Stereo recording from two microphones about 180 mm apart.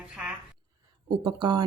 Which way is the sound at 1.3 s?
25° right (ahead or behind).